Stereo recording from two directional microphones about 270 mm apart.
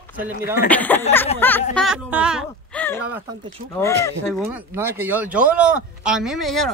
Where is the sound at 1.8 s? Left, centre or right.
Centre.